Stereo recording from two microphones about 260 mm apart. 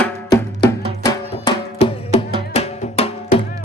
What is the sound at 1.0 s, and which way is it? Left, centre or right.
Music, centre.